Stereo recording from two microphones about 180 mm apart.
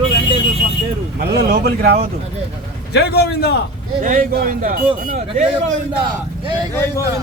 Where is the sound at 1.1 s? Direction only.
65° right (ahead or behind).